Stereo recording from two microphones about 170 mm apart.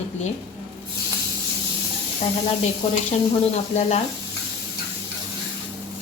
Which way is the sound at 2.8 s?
40° left (ahead or behind).